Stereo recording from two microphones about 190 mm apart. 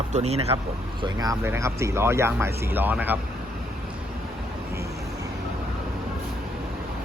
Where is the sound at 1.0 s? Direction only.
20° right (ahead or behind).